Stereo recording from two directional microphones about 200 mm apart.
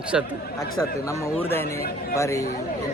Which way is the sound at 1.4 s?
10° left (ahead or behind).